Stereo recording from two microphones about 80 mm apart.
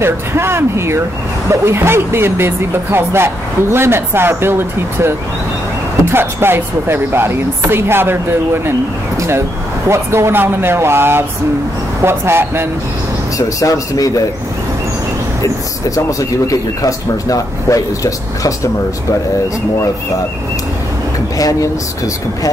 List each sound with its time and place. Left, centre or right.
0.0 s speech: right
9.8 s speech: right
13.6 s speech: left
15.4 s speech: left
21.4 s speech: left